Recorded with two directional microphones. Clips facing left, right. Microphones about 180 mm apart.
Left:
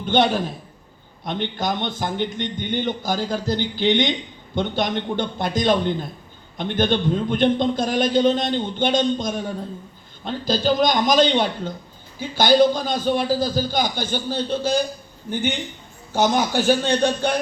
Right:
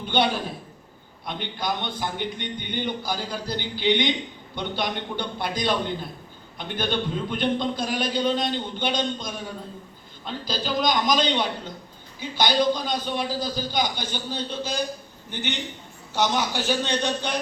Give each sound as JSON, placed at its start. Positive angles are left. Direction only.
{"t": 0.1, "sound": "a man's voice", "side_deg": 45}
{"t": 10.2, "sound": "a man's voice", "side_deg": 45}